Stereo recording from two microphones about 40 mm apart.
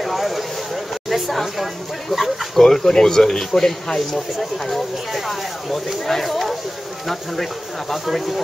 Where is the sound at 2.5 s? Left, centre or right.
Centre.